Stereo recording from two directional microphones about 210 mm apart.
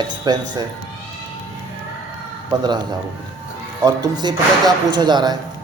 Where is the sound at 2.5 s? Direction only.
20° right (ahead or behind).